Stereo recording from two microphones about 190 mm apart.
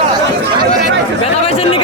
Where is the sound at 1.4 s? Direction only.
30° left (ahead or behind).